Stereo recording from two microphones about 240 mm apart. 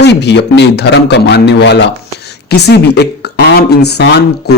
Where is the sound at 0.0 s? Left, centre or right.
Left.